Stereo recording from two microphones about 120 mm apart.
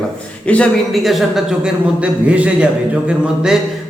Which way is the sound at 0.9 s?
Centre (ahead or behind).